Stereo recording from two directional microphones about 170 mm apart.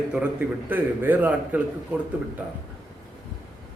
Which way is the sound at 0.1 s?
10° right (ahead or behind).